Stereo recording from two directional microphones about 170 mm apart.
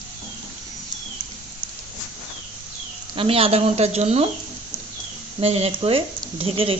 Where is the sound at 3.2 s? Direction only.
35° right (ahead or behind).